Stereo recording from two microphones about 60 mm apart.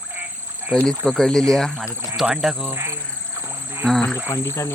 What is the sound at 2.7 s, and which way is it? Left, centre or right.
Insect, right.